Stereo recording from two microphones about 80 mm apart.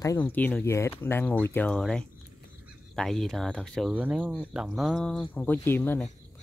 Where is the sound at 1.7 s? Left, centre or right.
Centre.